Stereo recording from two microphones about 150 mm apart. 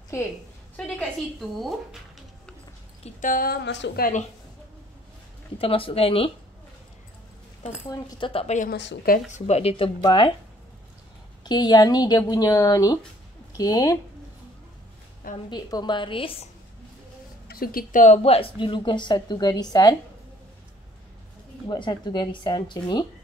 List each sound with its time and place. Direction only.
0.7 s a woman's voice: 5° left (ahead or behind)
1.6 s music: centre (ahead or behind)
3.0 s speech: 60° left (ahead or behind); by 4.1 s 90° left
5.6 s a woman's voice: 40° left (ahead or behind)
8.2 s a woman's voice: 40° left (ahead or behind)
8.5 s speech: 75° left (ahead or behind)
9.5 s a woman's voice: 40° left (ahead or behind)
11.4 s speech: 30° left (ahead or behind)
15.5 s a woman's voice: 30° left (ahead or behind)
17.5 s a woman's voice: 80° left; by 20.0 s 25° left (ahead or behind)
21.6 s a woman's voice: 30° left (ahead or behind)